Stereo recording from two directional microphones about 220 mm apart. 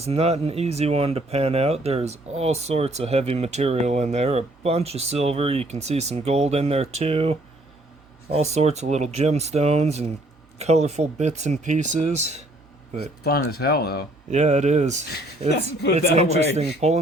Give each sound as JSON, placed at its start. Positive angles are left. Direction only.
{"t": 0.0, "sound": "speech", "side_deg": -30}
{"t": 13.5, "sound": "speech", "side_deg": 45}
{"t": 14.3, "sound": "speech", "side_deg": -30}
{"t": 15.1, "sound": "speech", "side_deg": 50}
{"t": 16.0, "sound": "speech", "side_deg": -30}